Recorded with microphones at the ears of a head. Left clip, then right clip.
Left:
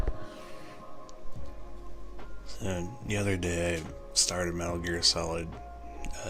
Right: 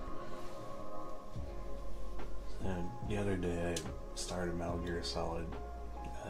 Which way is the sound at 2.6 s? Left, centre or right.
Left.